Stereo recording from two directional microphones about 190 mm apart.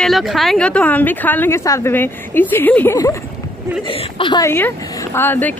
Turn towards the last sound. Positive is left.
turn(degrees=10)  # may be behind; listen again after turning